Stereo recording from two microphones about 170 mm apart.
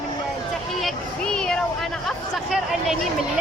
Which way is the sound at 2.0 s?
Centre (ahead or behind).